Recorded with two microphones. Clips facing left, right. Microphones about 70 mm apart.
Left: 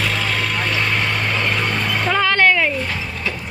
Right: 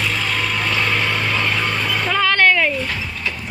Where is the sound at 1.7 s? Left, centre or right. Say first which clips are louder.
Left 1 dB; left.